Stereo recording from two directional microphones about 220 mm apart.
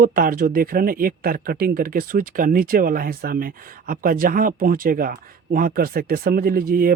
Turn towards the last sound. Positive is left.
turn(degrees=-40)  # may be behind; listen again after turning